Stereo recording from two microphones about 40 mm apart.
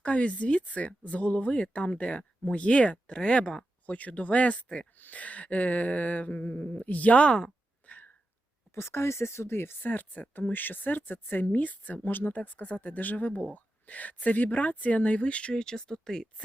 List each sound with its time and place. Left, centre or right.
0.0 s speech: left
3.8 s speech: left
7.9 s a sound: left
8.7 s speech: left
9.8 s speech: left
12.0 s speech: left
12.4 s speech: left
15.5 s speech: centre